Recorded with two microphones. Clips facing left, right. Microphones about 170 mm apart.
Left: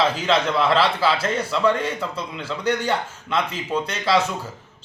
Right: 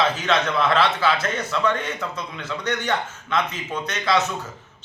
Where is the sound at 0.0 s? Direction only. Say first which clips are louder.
Left 1 dB; 30° left (ahead or behind).